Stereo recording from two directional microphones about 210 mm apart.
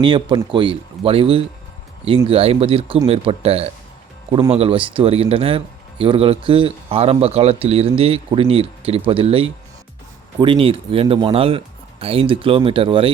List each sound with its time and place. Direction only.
0.0 s speech: 20° right (ahead or behind)